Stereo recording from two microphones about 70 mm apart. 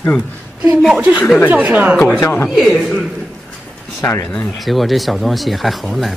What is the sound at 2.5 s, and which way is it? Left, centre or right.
Speech, centre.